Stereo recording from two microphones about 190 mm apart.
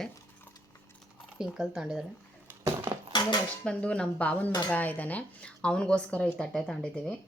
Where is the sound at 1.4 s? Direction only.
5° right (ahead or behind).